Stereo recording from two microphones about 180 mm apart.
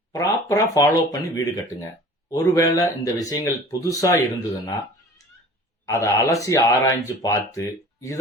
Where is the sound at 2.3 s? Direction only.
20° left (ahead or behind).